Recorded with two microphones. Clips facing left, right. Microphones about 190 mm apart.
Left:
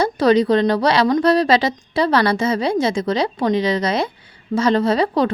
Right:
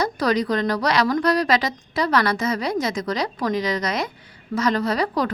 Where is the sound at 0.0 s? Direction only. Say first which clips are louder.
Left 6 dB; 25° left (ahead or behind).